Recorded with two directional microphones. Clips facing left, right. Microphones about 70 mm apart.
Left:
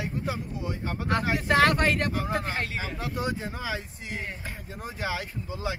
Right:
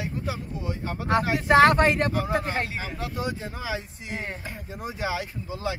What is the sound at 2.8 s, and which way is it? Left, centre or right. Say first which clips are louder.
Speech: even; centre.